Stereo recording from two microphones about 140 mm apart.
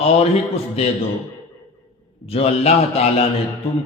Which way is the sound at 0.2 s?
45° left (ahead or behind).